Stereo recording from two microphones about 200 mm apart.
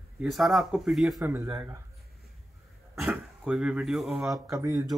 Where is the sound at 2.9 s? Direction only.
5° right (ahead or behind).